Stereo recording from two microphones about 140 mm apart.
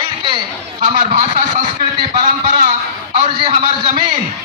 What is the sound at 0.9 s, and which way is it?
A man's voice, 60° right (ahead or behind).